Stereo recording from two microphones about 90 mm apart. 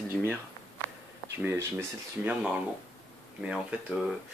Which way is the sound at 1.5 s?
30° right (ahead or behind).